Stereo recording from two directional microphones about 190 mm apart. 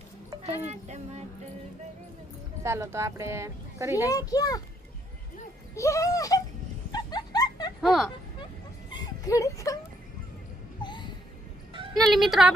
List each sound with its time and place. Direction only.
0.4 s speech: 35° right (ahead or behind)
2.6 s speech: 15° right (ahead or behind)
4.1 s a child's voice: 20° left (ahead or behind)
5.7 s a sound: 15° left (ahead or behind)
7.8 s speech: centre (ahead or behind)
8.9 s a sound: 20° left (ahead or behind)
10.8 s music: 25° left (ahead or behind)
11.9 s speech: centre (ahead or behind)